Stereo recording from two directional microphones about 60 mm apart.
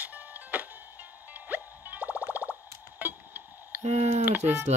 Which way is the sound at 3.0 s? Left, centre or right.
Right.